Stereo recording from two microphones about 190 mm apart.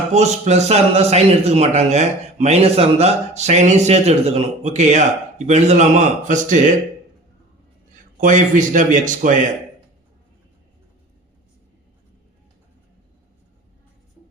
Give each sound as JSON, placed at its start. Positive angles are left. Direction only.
{"t": 0.1, "sound": "a man's voice", "side_deg": -35}
{"t": 8.2, "sound": "speech", "side_deg": -40}